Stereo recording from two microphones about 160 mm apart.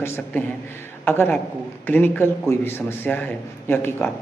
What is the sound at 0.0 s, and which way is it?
A man's voice, 15° left (ahead or behind).